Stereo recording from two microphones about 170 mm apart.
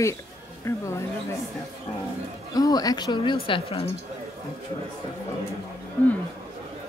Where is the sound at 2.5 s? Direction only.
20° left (ahead or behind).